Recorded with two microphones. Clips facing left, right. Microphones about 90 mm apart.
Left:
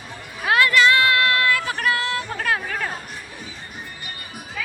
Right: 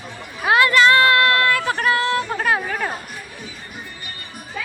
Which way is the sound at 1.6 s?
35° right (ahead or behind).